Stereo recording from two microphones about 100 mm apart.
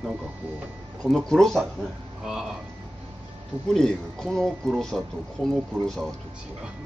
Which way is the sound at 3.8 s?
5° left (ahead or behind).